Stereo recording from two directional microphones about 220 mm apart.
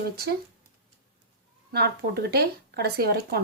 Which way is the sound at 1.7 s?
45° right (ahead or behind).